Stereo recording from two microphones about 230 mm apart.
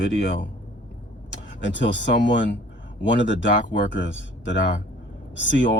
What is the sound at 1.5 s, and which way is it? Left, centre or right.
Speech, left.